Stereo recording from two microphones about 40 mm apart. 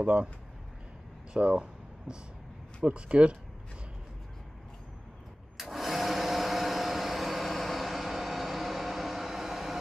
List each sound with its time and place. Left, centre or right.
1.3 s a sound: right
2.8 s speech: right
5.6 s vacuum cleaner: centre